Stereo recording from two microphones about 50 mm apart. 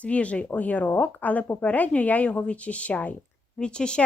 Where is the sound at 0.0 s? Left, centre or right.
Left.